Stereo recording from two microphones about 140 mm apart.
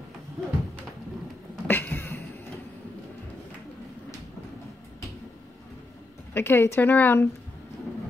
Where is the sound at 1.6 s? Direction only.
15° left (ahead or behind).